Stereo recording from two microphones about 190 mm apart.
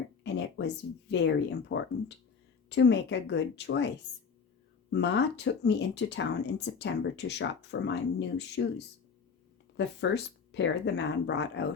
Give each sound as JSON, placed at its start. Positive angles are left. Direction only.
{"t": 0.2, "sound": "a sound", "side_deg": 65}
{"t": 1.1, "sound": "speech", "side_deg": 65}
{"t": 4.9, "sound": "speech", "side_deg": 65}
{"t": 9.7, "sound": "speech", "side_deg": 65}